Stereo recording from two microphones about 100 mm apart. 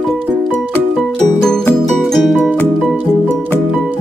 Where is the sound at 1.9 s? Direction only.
Centre (ahead or behind).